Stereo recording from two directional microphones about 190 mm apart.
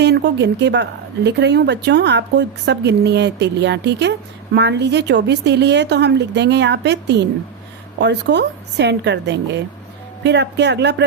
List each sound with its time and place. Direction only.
0.0 s a woman's voice: 65° right (ahead or behind)